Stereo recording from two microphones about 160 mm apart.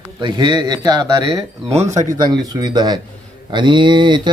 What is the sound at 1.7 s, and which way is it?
Speech, 45° right (ahead or behind).